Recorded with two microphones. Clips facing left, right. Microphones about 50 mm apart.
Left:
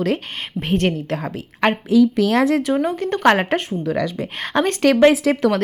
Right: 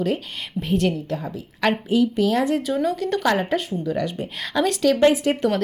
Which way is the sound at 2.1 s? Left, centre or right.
Left.